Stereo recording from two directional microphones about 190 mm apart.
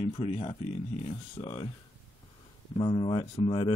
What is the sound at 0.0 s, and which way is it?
Speech, 30° left (ahead or behind).